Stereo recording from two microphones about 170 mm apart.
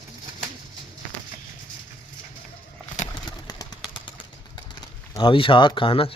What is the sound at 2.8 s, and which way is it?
Bird, 45° left (ahead or behind).